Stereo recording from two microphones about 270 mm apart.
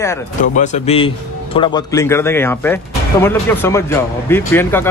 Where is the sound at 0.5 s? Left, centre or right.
Left; by 4.9 s centre.